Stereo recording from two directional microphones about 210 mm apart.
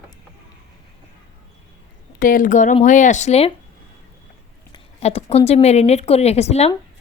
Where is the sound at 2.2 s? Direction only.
40° left (ahead or behind).